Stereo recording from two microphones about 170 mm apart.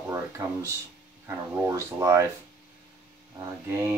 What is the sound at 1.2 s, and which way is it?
Speech, 15° right (ahead or behind).